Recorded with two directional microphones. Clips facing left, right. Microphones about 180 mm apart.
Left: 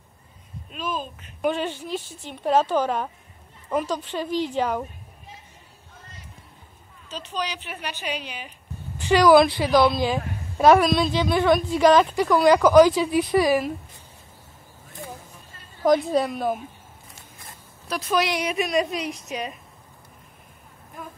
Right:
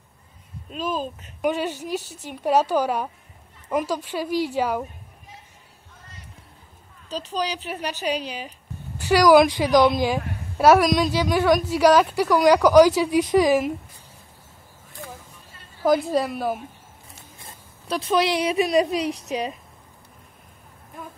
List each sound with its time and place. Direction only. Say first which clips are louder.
0.7 s speech: right 3 dB; 35° right (ahead or behind)
1.4 s a woman's voice: right 1 dB; 10° right (ahead or behind)
7.1 s a woman's voice: right 4 dB; 35° right (ahead or behind)
9.0 s a woman's voice: right 1 dB; 10° right (ahead or behind)
15.8 s a woman's voice: left 1 dB; centre (ahead or behind)
17.4 s speech: even; 25° right (ahead or behind)